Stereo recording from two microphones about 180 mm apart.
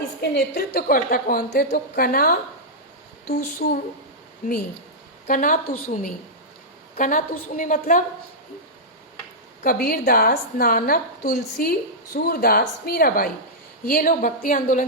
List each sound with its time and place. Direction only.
0.2 s a woman's voice: 65° left (ahead or behind)
5.2 s a woman's voice: 50° left (ahead or behind)
9.6 s a woman's voice: 55° left (ahead or behind)